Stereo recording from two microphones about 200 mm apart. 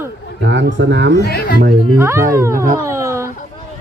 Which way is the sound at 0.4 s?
65° right (ahead or behind).